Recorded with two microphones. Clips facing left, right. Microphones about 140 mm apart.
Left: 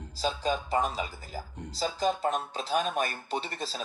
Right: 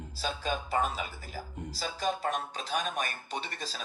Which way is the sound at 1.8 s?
25° left (ahead or behind).